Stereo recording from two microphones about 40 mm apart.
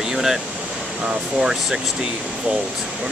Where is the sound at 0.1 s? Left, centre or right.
Centre.